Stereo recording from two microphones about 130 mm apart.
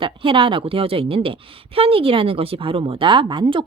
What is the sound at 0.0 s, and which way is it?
A woman's voice, 40° right (ahead or behind).